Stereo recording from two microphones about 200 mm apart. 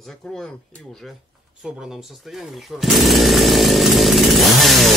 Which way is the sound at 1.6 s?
Centre (ahead or behind).